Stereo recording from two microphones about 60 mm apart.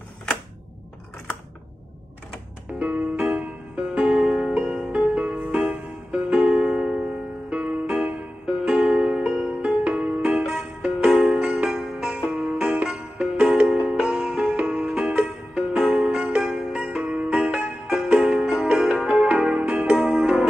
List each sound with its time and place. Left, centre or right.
2.8 s music: right
7.4 s music: right
12.3 s music: right
17.4 s music: centre